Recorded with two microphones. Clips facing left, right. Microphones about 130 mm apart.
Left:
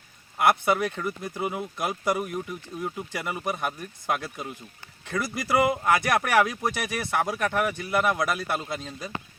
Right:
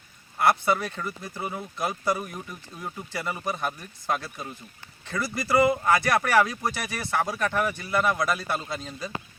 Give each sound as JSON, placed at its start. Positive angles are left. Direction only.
{"t": 0.3, "sound": "speech", "side_deg": 15}